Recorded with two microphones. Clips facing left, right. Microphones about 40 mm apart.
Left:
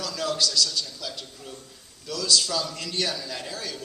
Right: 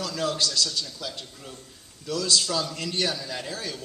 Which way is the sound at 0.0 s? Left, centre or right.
Right.